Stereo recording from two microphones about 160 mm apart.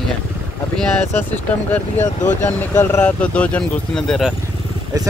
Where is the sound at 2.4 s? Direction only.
15° left (ahead or behind).